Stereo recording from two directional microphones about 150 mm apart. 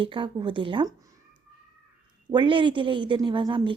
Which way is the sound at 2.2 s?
30° right (ahead or behind).